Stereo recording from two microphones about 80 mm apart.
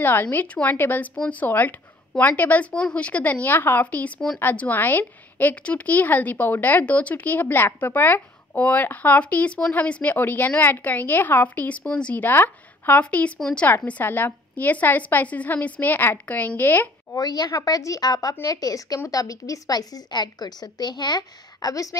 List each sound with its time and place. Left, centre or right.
0.0 s a woman's voice: left
1.1 s speech: centre
1.5 s a woman's voice: left
13.0 s a woman's voice: centre
17.2 s a woman's voice: left
17.5 s a woman's voice: left